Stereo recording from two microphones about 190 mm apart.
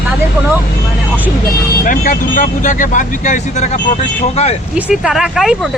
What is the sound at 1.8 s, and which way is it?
Speech, 45° left (ahead or behind).